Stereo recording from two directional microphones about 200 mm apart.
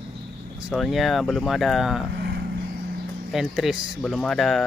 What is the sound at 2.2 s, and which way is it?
Vehicle, 55° right (ahead or behind).